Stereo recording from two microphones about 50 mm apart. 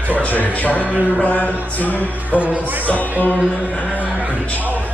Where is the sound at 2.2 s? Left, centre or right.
Right.